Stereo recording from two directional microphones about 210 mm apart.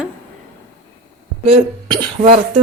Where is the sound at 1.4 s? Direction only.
25° right (ahead or behind).